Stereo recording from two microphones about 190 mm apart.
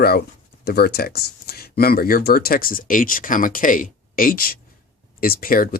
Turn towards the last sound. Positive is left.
turn(degrees=50)  # may be behind; listen again after turning